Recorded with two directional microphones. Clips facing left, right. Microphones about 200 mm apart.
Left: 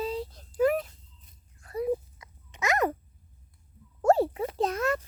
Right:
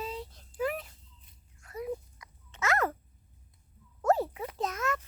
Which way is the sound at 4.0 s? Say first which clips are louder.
Left 5 dB; 30° left (ahead or behind).